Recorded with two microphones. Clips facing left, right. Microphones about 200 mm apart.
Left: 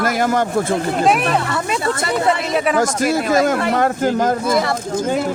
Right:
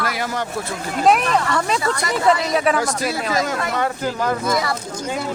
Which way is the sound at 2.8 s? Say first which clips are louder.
Left 5 dB; 45° left (ahead or behind).